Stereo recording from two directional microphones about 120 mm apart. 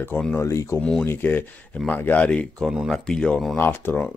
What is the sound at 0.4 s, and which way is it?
Speech, 25° left (ahead or behind).